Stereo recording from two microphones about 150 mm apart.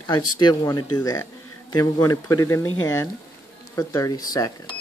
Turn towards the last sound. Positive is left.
turn(degrees=25)  # may be behind; listen again after turning